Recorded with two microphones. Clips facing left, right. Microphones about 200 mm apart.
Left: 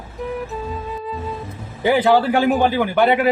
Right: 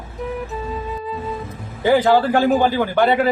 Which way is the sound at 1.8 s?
15° left (ahead or behind).